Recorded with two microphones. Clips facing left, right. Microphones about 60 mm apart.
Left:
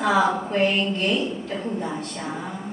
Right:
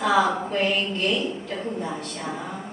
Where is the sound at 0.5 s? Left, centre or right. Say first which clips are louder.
Left 2 dB; left.